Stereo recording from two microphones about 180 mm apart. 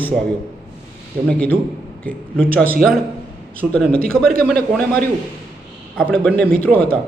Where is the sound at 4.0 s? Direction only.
55° right (ahead or behind).